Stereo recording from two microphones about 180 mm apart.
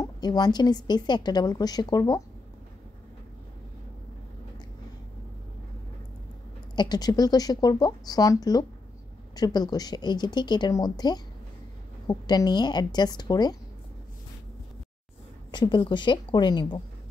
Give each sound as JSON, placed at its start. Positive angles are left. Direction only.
{"t": 0.0, "sound": "a woman's voice", "side_deg": 25}
{"t": 6.7, "sound": "a woman's voice", "side_deg": 25}
{"t": 15.5, "sound": "a woman's voice", "side_deg": 25}